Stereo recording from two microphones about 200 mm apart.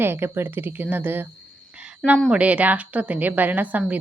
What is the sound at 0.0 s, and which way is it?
A woman's voice, 10° right (ahead or behind).